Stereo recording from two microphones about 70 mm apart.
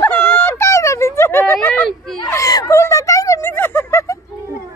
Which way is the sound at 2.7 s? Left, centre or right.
Left.